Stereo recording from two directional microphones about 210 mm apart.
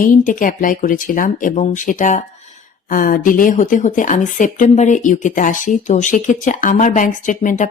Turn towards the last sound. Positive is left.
turn(degrees=35)  # may be behind; listen again after turning